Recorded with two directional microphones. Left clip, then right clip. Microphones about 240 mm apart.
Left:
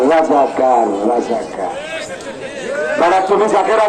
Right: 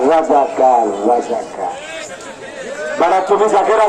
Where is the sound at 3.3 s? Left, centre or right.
Right.